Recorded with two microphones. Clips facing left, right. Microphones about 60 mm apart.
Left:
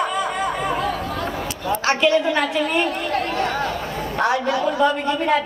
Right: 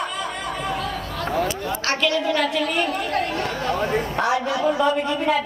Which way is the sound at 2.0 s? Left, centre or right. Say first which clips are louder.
Left 2 dB; left.